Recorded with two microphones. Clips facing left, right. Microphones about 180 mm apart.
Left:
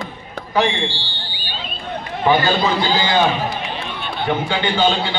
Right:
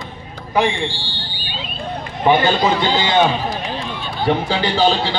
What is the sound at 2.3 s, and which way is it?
Speech, 20° right (ahead or behind).